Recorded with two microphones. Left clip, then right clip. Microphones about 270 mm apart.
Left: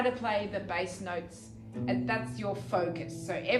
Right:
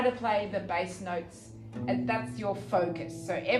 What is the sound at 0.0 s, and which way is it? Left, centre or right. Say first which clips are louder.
A woman's voice: right 2 dB; right.